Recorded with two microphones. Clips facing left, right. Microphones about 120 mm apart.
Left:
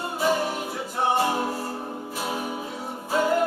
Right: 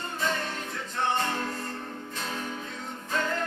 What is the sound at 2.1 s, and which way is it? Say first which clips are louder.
Music: left 6 dB; 10° left (ahead or behind).